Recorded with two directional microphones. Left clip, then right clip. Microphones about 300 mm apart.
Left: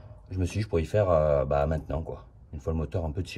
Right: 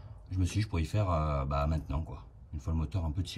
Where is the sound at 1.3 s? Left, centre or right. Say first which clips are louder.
Left 9 dB; centre.